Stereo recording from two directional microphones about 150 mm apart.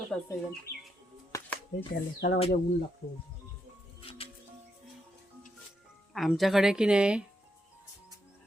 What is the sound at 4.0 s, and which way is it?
Music, 40° left (ahead or behind).